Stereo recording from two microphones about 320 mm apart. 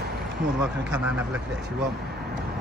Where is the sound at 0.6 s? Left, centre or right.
Centre.